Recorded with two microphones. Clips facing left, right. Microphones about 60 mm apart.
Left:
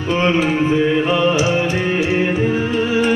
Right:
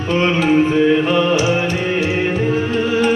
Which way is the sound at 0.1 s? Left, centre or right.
Centre.